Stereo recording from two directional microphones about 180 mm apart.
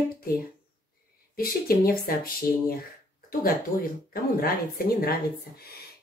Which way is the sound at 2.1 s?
55° left (ahead or behind).